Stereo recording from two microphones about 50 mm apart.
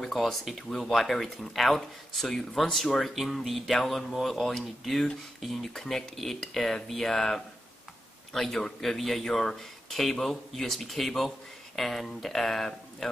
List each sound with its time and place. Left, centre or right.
0.0 s speech: centre